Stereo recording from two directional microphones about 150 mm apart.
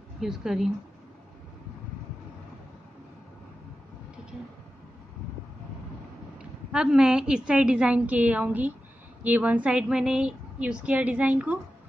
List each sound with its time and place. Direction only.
0.2 s speech: 5° right (ahead or behind)
6.3 s a woman's voice: 5° right (ahead or behind)